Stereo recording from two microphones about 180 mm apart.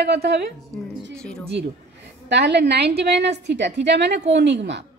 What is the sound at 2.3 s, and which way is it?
A woman's voice, 70° right (ahead or behind).